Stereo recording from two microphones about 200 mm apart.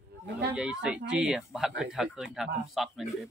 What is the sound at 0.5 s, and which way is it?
Speech, 5° right (ahead or behind).